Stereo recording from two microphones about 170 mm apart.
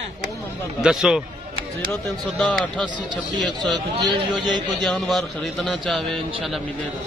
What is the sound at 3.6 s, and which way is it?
Speech, 25° right (ahead or behind).